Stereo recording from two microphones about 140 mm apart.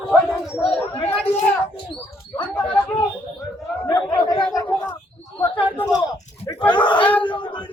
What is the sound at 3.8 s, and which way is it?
Chatter, 30° left (ahead or behind).